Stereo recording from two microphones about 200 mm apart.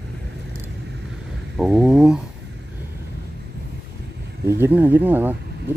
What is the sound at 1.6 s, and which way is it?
Speech, centre (ahead or behind).